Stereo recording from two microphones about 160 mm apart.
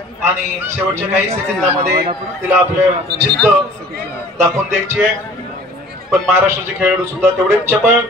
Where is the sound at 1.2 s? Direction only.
40° right (ahead or behind).